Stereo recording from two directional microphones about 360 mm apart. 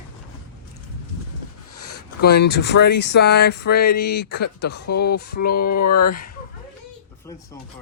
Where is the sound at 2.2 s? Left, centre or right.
Left.